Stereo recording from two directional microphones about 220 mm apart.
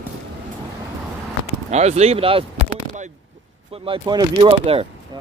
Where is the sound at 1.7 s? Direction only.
30° right (ahead or behind).